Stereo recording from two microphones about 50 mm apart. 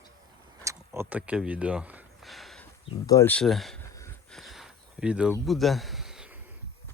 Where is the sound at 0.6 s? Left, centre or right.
Right.